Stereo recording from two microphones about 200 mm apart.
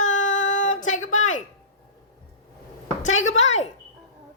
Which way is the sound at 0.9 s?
90° left.